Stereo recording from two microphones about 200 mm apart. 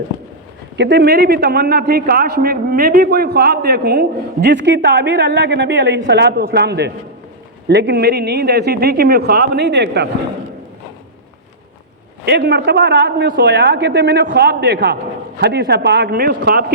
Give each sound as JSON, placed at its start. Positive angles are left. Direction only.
{"t": 0.8, "sound": "a man's voice", "side_deg": -60}
{"t": 12.2, "sound": "a man's voice", "side_deg": -55}